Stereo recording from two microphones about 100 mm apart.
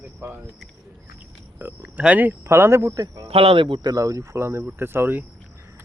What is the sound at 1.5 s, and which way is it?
Speech, 15° right (ahead or behind).